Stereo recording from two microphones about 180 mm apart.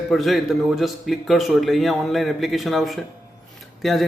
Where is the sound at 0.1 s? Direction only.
Centre (ahead or behind).